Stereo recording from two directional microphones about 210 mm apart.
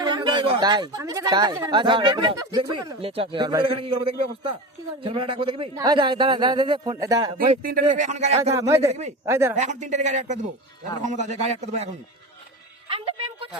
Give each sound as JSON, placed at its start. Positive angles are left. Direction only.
{"t": 0.0, "sound": "speech", "side_deg": -20}
{"t": 7.6, "sound": "speech", "side_deg": -45}
{"t": 8.5, "sound": "a man's voice", "side_deg": -15}
{"t": 8.9, "sound": "speech", "side_deg": -30}
{"t": 9.2, "sound": "a man's voice", "side_deg": -10}
{"t": 9.6, "sound": "speech", "side_deg": -35}
{"t": 12.9, "sound": "music", "side_deg": -25}